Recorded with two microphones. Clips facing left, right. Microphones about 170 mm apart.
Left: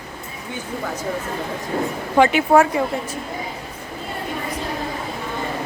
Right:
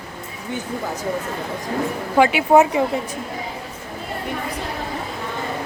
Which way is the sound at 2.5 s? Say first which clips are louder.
Right 1 dB; 20° right (ahead or behind).